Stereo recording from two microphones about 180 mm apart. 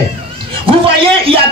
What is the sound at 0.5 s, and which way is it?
Speech, 30° right (ahead or behind).